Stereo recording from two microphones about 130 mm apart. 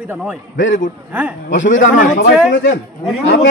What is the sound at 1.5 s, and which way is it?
Speech, 75° left (ahead or behind).